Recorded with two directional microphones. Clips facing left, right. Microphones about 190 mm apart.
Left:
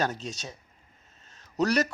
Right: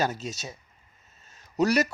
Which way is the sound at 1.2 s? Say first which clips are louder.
Right 2 dB; 10° right (ahead or behind).